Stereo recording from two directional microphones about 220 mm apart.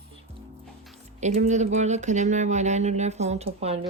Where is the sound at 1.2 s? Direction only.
30° right (ahead or behind).